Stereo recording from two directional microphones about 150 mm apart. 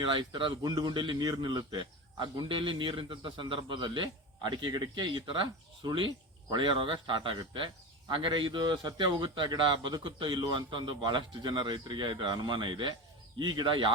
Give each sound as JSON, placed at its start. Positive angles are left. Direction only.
{"t": 0.0, "sound": "speech", "side_deg": -35}